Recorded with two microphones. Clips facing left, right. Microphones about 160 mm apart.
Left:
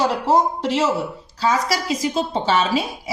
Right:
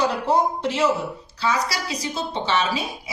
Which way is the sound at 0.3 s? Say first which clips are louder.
Left 3 dB; 35° left (ahead or behind).